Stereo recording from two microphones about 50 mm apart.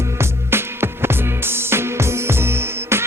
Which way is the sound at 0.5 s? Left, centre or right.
Right.